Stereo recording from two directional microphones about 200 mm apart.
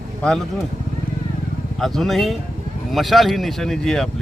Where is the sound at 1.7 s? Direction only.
Centre (ahead or behind).